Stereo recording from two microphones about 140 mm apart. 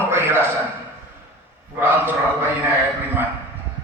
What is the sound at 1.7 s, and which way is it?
Speech, 15° right (ahead or behind).